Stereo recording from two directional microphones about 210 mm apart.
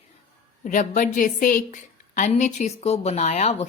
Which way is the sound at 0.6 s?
35° left (ahead or behind).